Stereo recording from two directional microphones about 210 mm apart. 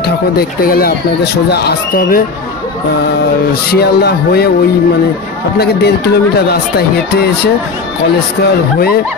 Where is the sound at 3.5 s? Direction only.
50° left (ahead or behind).